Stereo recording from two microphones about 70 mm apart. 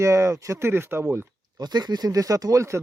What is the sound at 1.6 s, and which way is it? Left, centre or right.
Speech, right.